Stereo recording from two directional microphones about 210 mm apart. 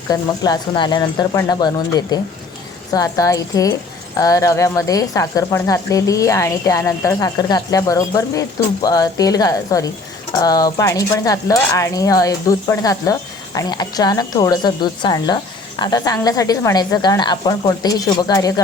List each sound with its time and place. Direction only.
0.1 s speech: 20° left (ahead or behind)